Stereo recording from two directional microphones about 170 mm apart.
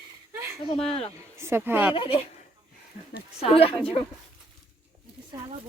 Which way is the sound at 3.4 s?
35° left (ahead or behind).